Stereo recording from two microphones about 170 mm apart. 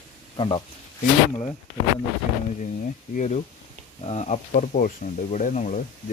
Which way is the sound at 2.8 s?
50° left (ahead or behind).